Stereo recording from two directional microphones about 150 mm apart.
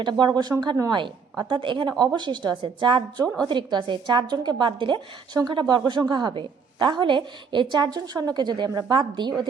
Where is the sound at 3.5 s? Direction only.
30° right (ahead or behind).